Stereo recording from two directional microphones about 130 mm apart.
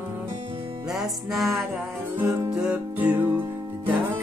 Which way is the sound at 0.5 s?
40° right (ahead or behind).